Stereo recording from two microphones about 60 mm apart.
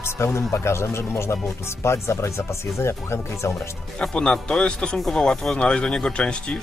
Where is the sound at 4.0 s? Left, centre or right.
Centre.